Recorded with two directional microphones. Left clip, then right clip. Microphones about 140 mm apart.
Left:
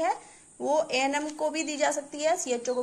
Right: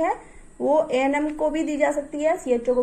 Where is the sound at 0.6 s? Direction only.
20° left (ahead or behind).